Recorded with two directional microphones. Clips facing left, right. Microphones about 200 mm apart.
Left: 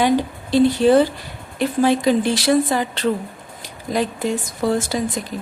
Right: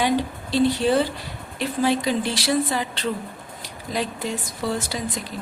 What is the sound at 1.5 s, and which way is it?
A woman's voice, 50° left (ahead or behind).